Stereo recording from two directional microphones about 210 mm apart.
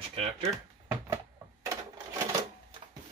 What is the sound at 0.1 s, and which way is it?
Speech, 30° right (ahead or behind).